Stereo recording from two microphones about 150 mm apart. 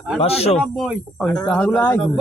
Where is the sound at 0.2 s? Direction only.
45° left (ahead or behind).